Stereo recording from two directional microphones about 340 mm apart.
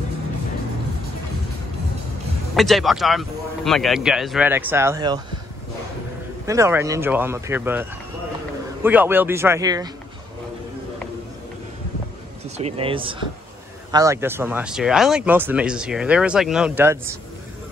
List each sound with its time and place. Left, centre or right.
2.5 s speech: centre
6.4 s speech: centre
8.8 s speech: centre
12.5 s speech: centre